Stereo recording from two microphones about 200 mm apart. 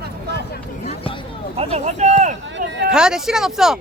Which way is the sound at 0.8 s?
25° left (ahead or behind).